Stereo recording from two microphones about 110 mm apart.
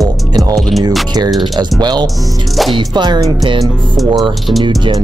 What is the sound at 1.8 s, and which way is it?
Speech, 40° right (ahead or behind).